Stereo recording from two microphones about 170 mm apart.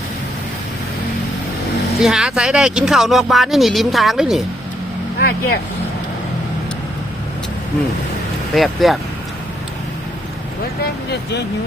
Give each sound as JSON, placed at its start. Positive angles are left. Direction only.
{"t": 2.0, "sound": "speech", "side_deg": -5}
{"t": 8.5, "sound": "speech", "side_deg": 0}
{"t": 11.1, "sound": "speech", "side_deg": 80}